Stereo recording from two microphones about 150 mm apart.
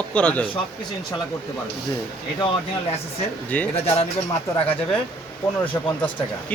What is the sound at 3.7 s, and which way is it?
Speech, 45° left (ahead or behind).